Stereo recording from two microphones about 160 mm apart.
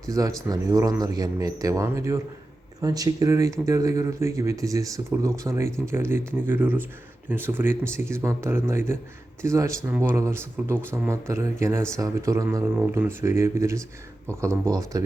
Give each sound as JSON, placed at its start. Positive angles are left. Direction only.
{"t": 0.1, "sound": "a man's voice", "side_deg": -20}
{"t": 12.7, "sound": "a man's voice", "side_deg": -10}